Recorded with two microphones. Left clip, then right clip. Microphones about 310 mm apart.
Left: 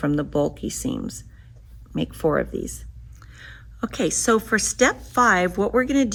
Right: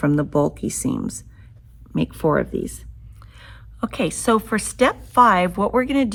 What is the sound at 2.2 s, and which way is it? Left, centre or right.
Speech, right.